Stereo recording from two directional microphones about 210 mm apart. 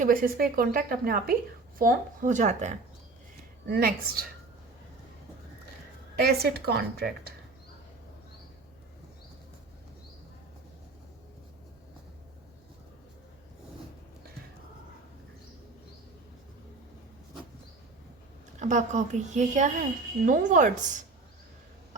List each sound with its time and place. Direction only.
0.0 s a woman's voice: 40° right (ahead or behind)
3.7 s speech: 45° right (ahead or behind)
6.1 s speech: 50° right (ahead or behind)
18.6 s a woman's voice: 35° right (ahead or behind)